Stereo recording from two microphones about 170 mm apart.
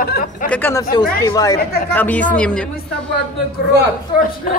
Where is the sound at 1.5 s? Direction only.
65° left (ahead or behind).